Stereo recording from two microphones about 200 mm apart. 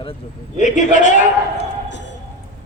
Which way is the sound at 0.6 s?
40° left (ahead or behind).